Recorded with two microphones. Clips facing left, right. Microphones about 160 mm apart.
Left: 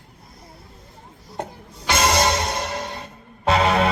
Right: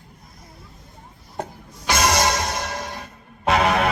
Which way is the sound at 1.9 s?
25° left (ahead or behind).